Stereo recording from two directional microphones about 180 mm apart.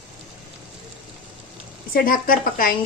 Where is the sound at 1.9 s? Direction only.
50° left (ahead or behind).